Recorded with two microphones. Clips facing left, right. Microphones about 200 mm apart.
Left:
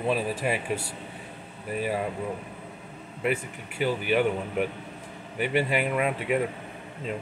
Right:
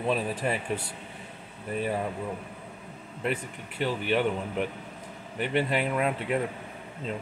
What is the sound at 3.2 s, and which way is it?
Speech, 10° left (ahead or behind).